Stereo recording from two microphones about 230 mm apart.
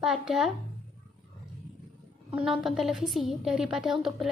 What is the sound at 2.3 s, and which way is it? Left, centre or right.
A woman's voice, centre.